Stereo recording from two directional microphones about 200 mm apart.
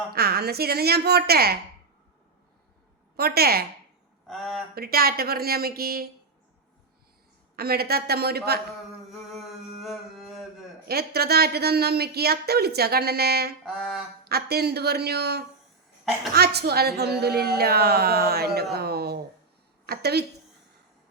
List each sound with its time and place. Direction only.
0.1 s a woman's voice: 50° right (ahead or behind)
3.2 s a woman's voice: 50° right (ahead or behind)
4.3 s speech: centre (ahead or behind)
4.7 s a woman's voice: 50° right (ahead or behind)
7.5 s a woman's voice: 50° right (ahead or behind)
9.3 s a sound: centre (ahead or behind)
10.8 s a woman's voice: 50° right (ahead or behind)
13.7 s speech: centre (ahead or behind)
14.3 s a woman's voice: 50° right (ahead or behind)
19.8 s a sound: 55° right (ahead or behind)